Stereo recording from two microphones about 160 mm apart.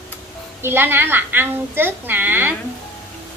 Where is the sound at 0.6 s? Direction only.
15° right (ahead or behind).